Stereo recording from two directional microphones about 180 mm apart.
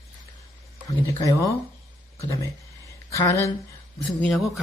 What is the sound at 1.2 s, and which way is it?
Speech, 20° left (ahead or behind).